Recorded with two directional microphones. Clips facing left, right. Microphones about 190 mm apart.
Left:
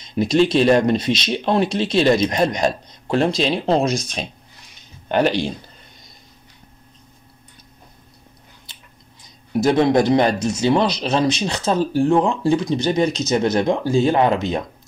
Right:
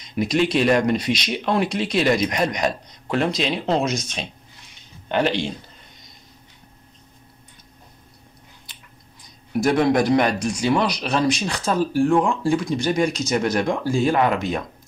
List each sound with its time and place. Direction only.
0.1 s speech: 30° left (ahead or behind)
5.0 s speech: 45° left (ahead or behind)
9.6 s speech: 25° left (ahead or behind)